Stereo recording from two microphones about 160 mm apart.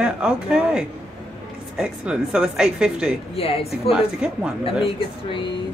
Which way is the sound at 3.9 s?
5° right (ahead or behind).